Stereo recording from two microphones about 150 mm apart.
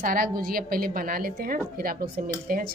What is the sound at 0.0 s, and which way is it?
A woman's voice, 75° right (ahead or behind).